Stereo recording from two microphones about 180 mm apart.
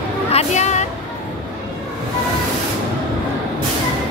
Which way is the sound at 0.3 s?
40° left (ahead or behind).